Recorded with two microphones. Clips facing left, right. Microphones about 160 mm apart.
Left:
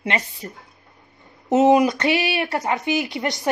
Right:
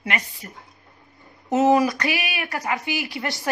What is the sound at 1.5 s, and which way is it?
Speech, 20° left (ahead or behind).